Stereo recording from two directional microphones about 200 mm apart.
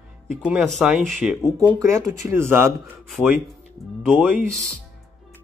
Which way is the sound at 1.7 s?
15° right (ahead or behind).